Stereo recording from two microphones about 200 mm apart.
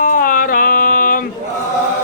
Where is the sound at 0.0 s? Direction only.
45° left (ahead or behind).